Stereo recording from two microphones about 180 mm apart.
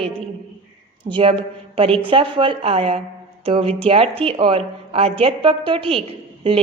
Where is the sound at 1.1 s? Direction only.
30° right (ahead or behind).